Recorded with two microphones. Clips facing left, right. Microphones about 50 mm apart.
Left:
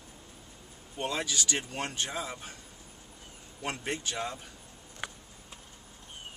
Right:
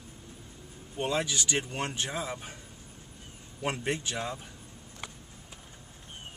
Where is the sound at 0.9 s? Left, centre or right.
Centre.